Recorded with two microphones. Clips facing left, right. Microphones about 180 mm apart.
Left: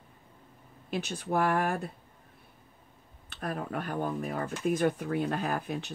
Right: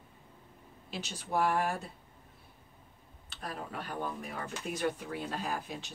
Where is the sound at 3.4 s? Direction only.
55° left (ahead or behind).